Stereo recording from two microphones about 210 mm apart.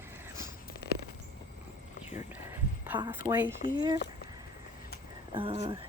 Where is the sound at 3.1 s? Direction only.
10° right (ahead or behind).